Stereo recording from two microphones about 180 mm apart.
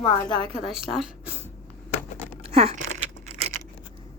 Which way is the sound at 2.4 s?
35° right (ahead or behind).